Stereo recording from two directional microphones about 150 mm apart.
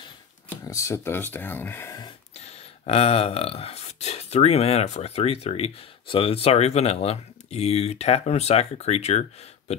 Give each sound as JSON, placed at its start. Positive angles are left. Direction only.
{"t": 0.7, "sound": "speech", "side_deg": 20}
{"t": 2.3, "sound": "speech", "side_deg": 45}